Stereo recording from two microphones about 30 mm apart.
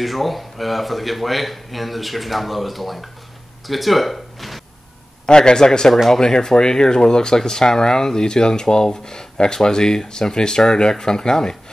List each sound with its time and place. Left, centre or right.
0.0 s speech: centre
5.2 s speech: left